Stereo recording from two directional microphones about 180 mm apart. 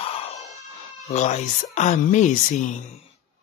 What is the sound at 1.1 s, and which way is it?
Speech, 40° left (ahead or behind).